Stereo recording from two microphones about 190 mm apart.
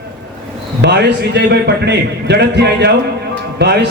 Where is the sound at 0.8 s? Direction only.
65° right (ahead or behind).